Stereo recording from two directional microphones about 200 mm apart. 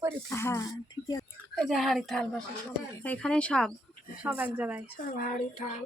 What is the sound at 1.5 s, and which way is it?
Speech, centre (ahead or behind).